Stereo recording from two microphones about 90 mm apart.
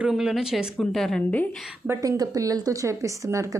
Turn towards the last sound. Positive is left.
turn(degrees=-35)  # may be behind; listen again after turning